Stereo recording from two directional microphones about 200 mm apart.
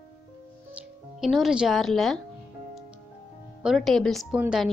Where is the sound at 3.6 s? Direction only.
Centre (ahead or behind).